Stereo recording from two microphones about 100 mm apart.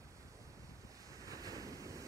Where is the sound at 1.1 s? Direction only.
35° right (ahead or behind).